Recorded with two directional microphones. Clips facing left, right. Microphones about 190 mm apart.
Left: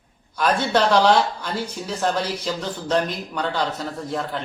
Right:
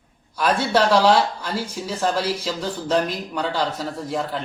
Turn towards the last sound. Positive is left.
turn(degrees=-10)  # may be behind; listen again after turning